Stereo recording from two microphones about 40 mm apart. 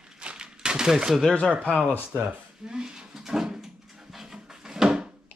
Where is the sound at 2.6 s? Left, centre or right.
Centre.